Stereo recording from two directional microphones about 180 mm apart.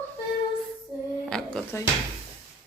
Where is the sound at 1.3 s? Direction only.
5° left (ahead or behind).